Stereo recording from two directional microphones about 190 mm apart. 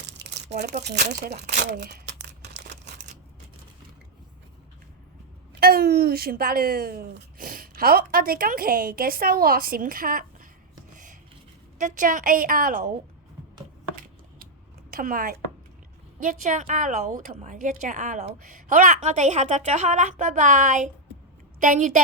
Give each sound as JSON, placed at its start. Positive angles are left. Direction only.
{"t": 0.2, "sound": "crumpling", "side_deg": -65}
{"t": 0.6, "sound": "speech", "side_deg": -60}
{"t": 0.9, "sound": "speech", "side_deg": -40}
{"t": 2.5, "sound": "a sound", "side_deg": -65}
{"t": 5.5, "sound": "a woman's voice", "side_deg": -55}
{"t": 10.9, "sound": "rub", "side_deg": -40}
{"t": 11.8, "sound": "a woman's voice", "side_deg": -40}
{"t": 14.8, "sound": "a woman's voice", "side_deg": -45}